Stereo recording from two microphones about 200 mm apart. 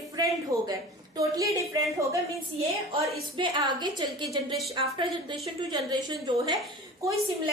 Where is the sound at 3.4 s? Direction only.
25° right (ahead or behind).